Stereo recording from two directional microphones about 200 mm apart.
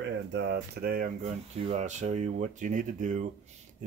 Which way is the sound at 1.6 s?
35° right (ahead or behind).